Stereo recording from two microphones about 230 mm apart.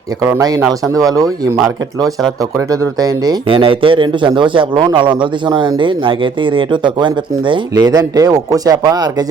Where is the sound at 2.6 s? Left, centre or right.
Centre.